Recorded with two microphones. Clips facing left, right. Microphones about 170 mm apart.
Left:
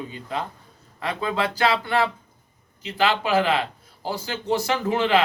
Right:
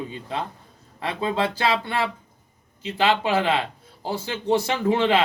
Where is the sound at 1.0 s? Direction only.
25° right (ahead or behind).